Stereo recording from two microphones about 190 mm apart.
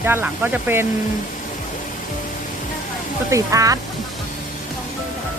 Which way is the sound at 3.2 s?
15° right (ahead or behind).